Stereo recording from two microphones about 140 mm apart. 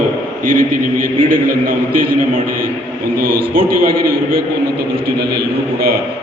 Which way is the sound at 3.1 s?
90° right.